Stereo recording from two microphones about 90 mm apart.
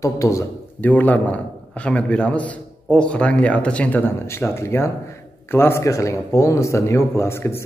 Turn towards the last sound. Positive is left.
turn(degrees=30)  # may be behind; listen again after turning